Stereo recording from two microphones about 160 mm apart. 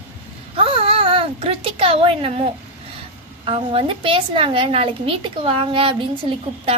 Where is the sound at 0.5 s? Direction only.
35° right (ahead or behind).